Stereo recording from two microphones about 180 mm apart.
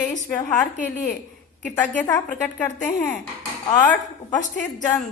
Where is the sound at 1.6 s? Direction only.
10° left (ahead or behind).